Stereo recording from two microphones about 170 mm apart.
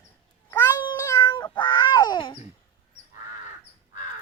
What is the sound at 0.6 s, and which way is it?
Cat, 20° left (ahead or behind).